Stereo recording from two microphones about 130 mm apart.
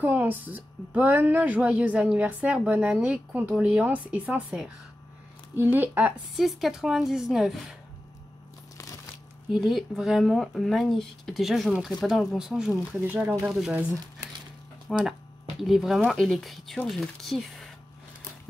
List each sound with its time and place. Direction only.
0.0 s speech: 15° right (ahead or behind)
6.3 s speech: centre (ahead or behind)
8.7 s crunch: 25° left (ahead or behind)
9.5 s speech: centre (ahead or behind)
13.5 s speech: 5° right (ahead or behind)
14.9 s speech: 5° right (ahead or behind)